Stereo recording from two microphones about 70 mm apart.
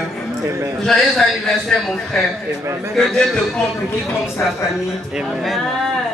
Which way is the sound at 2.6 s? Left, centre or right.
Right.